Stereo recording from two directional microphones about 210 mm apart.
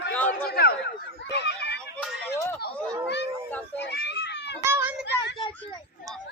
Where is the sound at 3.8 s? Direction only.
50° left (ahead or behind).